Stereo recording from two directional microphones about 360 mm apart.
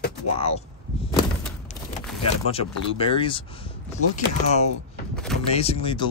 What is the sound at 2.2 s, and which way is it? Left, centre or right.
Speech, centre.